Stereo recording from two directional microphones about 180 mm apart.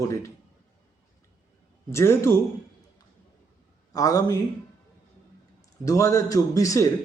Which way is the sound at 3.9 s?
20° left (ahead or behind).